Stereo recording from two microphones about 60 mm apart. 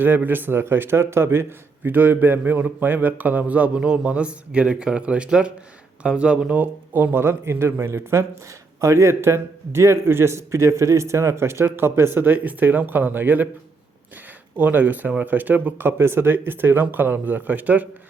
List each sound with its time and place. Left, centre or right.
0.0 s speech: right
1.9 s a man's voice: right
6.6 s speech: right
8.8 s a man's voice: right
14.5 s a man's voice: right